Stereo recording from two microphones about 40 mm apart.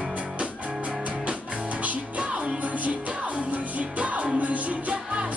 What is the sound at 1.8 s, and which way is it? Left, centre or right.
Music, right.